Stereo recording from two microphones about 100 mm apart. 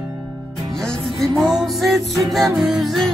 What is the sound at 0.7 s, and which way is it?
Music, 5° left (ahead or behind).